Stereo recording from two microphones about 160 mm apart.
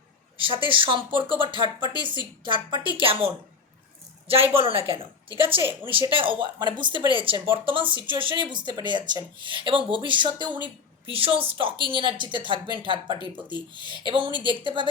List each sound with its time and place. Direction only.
0.4 s speech: 35° right (ahead or behind)
1.6 s speech: 25° left (ahead or behind)
2.0 s speech: 30° right (ahead or behind)
4.5 s speech: 35° right (ahead or behind)